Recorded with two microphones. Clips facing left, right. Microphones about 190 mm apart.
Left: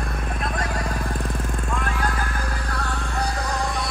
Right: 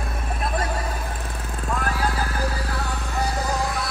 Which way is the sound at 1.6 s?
40° right (ahead or behind).